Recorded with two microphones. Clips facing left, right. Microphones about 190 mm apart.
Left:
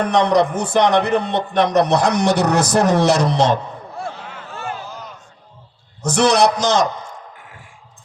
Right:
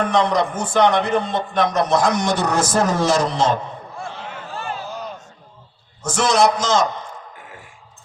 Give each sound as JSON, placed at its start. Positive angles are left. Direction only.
{"t": 0.2, "sound": "a man's voice", "side_deg": 70}
{"t": 4.5, "sound": "a sound", "side_deg": -30}
{"t": 6.1, "sound": "a man's voice", "side_deg": 70}